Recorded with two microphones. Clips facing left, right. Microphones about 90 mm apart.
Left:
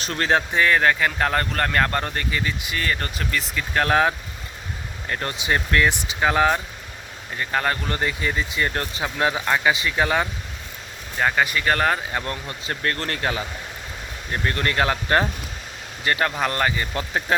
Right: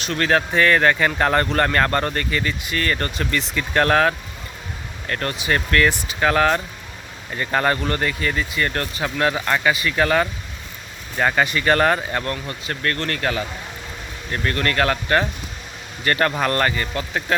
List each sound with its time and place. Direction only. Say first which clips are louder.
0.0 s speech: right 3 dB; 35° left (ahead or behind)
0.3 s speech: right 2 dB; 15° left (ahead or behind)
7.3 s speech: right 3 dB; centre (ahead or behind)
7.9 s speech: right 2 dB; 15° left (ahead or behind)
11.2 s speech: right 2 dB; centre (ahead or behind)
12.2 s speech: right 3 dB; 20° left (ahead or behind)
16.0 s speech: right 3 dB; 5° left (ahead or behind)
16.8 s speech: right 1 dB; 25° left (ahead or behind)